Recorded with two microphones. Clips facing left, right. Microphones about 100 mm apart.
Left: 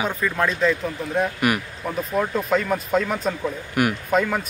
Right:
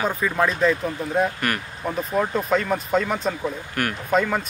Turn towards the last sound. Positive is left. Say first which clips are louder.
# even
turn(degrees=0)  # may be behind; listen again after turning